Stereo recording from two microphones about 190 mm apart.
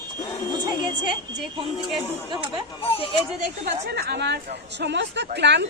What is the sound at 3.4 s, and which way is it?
A woman's voice, 60° right (ahead or behind).